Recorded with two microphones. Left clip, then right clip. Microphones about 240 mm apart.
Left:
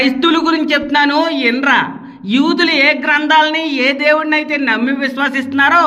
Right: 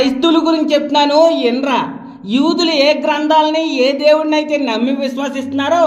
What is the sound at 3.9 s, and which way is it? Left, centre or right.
A man's voice, left.